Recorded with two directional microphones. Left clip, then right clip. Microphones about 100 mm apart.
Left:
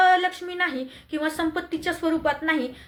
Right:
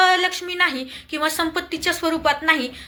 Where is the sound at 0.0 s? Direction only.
35° left (ahead or behind).